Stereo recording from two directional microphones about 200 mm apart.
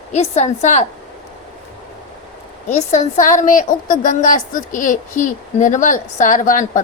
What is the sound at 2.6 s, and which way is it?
A woman's voice, 35° left (ahead or behind).